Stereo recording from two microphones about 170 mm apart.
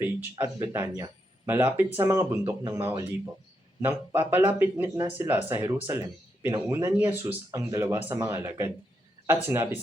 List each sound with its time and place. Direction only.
0.0 s speech: 10° right (ahead or behind)